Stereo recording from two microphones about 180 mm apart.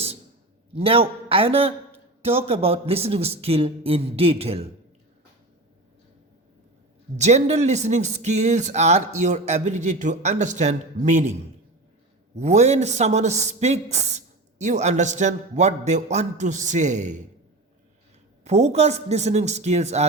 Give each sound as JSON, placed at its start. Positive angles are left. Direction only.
{"t": 0.7, "sound": "speech", "side_deg": -30}
{"t": 7.2, "sound": "speech", "side_deg": -40}
{"t": 12.4, "sound": "speech", "side_deg": -40}
{"t": 18.4, "sound": "speech", "side_deg": -40}